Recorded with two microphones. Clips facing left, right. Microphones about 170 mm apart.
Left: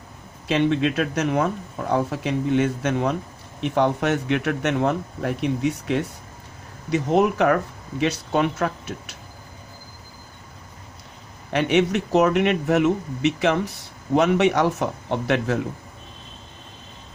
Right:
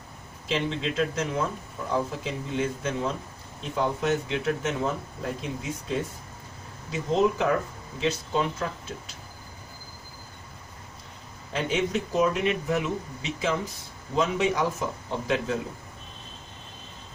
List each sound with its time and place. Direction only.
0.4 s speech: 65° left (ahead or behind)
11.5 s speech: 75° left (ahead or behind)